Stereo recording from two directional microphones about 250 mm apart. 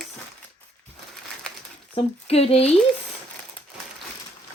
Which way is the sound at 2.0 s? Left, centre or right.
Left.